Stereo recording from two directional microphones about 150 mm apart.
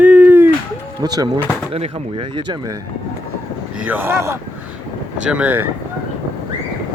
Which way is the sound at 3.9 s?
15° right (ahead or behind).